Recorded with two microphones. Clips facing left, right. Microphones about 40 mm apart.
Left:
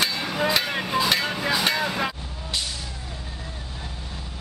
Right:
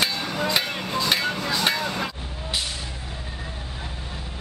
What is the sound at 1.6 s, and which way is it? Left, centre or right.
Vehicle, centre.